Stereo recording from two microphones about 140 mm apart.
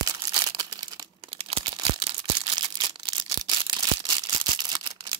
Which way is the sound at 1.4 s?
40° right (ahead or behind).